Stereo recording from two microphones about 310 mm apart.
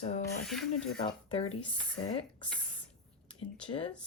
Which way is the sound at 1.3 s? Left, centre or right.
Centre.